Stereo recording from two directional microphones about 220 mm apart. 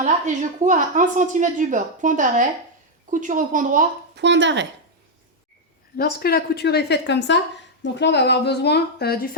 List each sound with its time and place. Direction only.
0.6 s a woman's voice: 35° right (ahead or behind)
4.1 s speech: 55° right (ahead or behind)
6.0 s a woman's voice: 45° left (ahead or behind)